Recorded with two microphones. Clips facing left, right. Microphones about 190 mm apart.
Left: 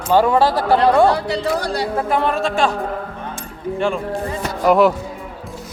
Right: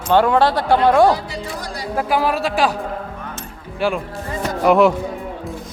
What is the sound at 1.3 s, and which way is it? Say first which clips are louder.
Speech: left 8 dB; 70° left (ahead or behind).